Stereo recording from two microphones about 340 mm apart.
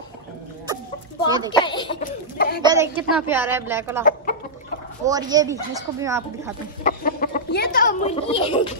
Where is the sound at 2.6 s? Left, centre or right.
Centre.